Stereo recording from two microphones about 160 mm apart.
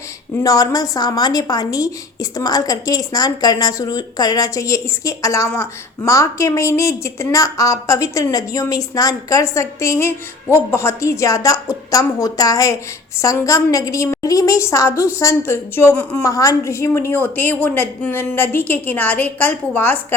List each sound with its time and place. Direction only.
0.3 s a woman's voice: 20° left (ahead or behind)